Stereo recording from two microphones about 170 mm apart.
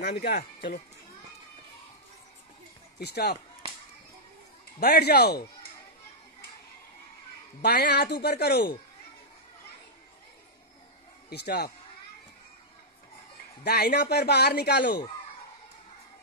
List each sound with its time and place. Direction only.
0.0 s speech: 65° left (ahead or behind)
3.0 s speech: 70° left (ahead or behind)
4.7 s speech: 70° left (ahead or behind)
7.6 s speech: 70° left (ahead or behind)
11.2 s speech: 70° left (ahead or behind)
13.7 s speech: 70° left (ahead or behind)